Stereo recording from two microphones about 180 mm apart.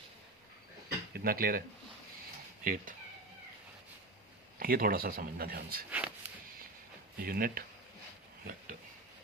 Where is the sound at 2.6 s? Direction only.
50° right (ahead or behind).